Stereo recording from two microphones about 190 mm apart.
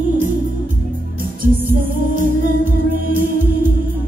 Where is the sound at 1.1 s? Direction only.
45° right (ahead or behind).